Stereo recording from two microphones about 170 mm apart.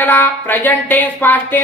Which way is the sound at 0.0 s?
10° left (ahead or behind).